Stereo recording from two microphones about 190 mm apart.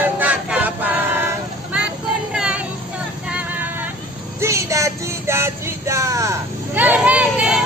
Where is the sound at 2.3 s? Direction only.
5° right (ahead or behind).